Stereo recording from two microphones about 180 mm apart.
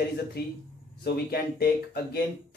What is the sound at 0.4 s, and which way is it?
Speech, 60° left (ahead or behind).